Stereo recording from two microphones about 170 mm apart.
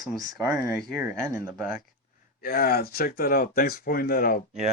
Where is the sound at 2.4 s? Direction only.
65° left (ahead or behind).